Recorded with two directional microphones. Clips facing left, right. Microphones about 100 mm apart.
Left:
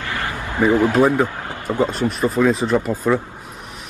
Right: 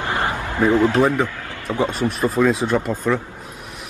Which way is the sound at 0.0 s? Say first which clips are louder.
Right 3 dB; 20° right (ahead or behind).